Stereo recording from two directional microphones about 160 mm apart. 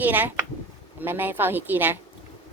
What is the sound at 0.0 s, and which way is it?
Speech, 10° right (ahead or behind).